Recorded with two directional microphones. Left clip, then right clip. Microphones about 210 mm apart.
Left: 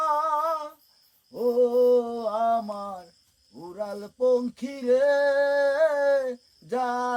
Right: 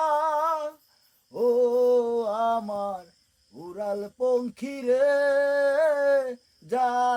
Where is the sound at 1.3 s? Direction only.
40° right (ahead or behind).